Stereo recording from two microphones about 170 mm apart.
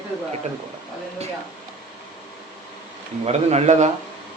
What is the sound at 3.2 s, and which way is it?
Speech, 40° right (ahead or behind).